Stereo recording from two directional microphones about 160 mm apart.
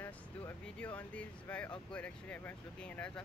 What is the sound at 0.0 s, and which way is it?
Speech, 10° left (ahead or behind).